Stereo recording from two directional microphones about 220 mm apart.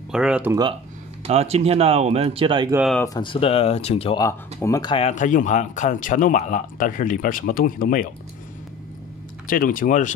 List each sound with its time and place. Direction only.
0.1 s speech: 5° right (ahead or behind)
1.2 s speech: 30° right (ahead or behind)
3.1 s speech: 20° left (ahead or behind)
4.6 s speech: 15° left (ahead or behind); by 8.1 s 40° left (ahead or behind)
9.5 s speech: 40° left (ahead or behind)